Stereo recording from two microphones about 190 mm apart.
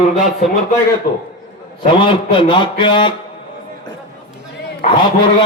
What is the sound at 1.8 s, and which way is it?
A man's voice, 25° left (ahead or behind).